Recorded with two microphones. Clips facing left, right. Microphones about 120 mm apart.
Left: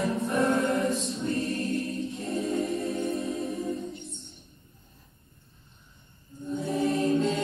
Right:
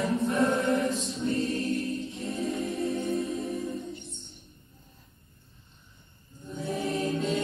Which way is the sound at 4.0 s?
30° left (ahead or behind).